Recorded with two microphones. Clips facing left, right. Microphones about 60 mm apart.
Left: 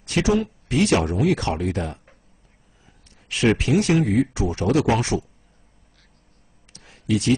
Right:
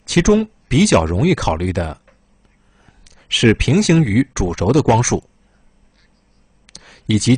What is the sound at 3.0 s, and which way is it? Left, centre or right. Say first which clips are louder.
Speech: right 6 dB; right.